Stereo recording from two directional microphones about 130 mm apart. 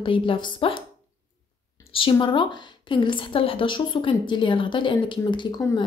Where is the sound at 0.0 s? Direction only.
40° left (ahead or behind).